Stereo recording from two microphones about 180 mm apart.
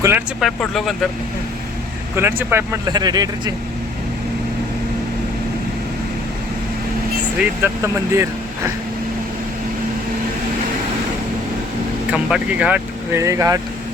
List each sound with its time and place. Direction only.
0.3 s speech: centre (ahead or behind)
2.1 s speech: 15° right (ahead or behind)
2.9 s speech: 20° right (ahead or behind)
7.3 s speech: 15° right (ahead or behind)
12.1 s speech: 5° right (ahead or behind)